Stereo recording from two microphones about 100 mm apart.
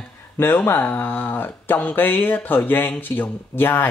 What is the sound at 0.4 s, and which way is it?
Speech, 20° left (ahead or behind).